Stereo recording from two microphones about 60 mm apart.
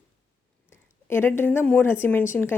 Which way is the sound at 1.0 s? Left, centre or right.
Left.